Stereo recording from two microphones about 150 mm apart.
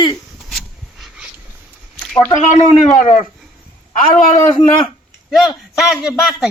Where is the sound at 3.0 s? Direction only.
55° left (ahead or behind).